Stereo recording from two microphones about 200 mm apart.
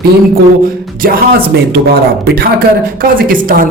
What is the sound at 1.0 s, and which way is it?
Speech, 45° right (ahead or behind).